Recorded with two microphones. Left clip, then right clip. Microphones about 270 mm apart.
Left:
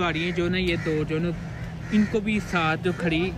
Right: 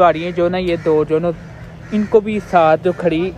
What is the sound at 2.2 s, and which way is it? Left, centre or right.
A man's voice, centre.